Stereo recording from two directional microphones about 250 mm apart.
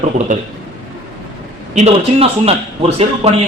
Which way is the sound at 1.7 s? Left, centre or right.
Right.